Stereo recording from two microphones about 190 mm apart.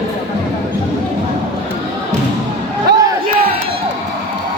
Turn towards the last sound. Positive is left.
turn(degrees=-60)  # may be behind; listen again after turning